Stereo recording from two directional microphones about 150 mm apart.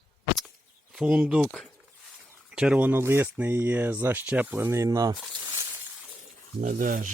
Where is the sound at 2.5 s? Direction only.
5° right (ahead or behind); by 5.1 s 25° right (ahead or behind).